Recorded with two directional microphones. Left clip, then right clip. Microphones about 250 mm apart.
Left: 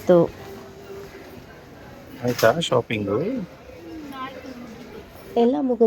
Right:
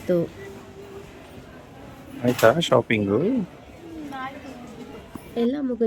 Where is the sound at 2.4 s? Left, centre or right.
Centre.